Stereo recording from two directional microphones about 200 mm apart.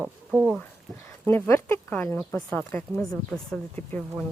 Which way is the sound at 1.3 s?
10° left (ahead or behind).